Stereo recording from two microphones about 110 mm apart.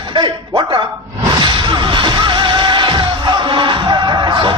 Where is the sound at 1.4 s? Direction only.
45° right (ahead or behind).